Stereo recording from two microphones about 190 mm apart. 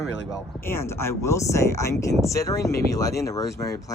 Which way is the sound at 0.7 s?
15° left (ahead or behind).